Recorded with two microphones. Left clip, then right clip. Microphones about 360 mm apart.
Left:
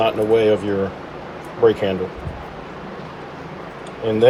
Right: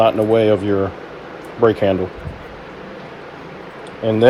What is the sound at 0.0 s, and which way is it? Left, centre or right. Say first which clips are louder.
Speech: right 2 dB; centre.